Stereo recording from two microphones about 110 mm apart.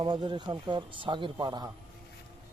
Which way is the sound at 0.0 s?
45° right (ahead or behind).